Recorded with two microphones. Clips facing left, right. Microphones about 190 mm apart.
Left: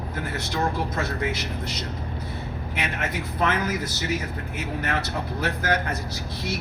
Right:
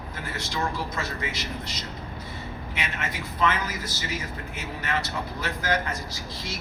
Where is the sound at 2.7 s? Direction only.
60° left (ahead or behind).